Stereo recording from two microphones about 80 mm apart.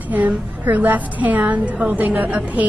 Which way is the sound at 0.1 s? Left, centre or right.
Right.